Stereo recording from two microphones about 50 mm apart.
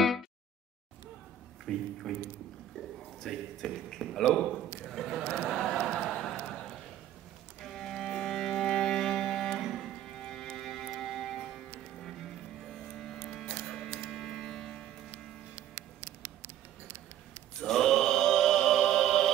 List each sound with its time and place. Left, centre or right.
1.7 s a man's voice: centre
5.5 s a sound: centre
7.6 s music: centre
13.3 s printer: centre
13.9 s a sound: centre
17.6 s chant: centre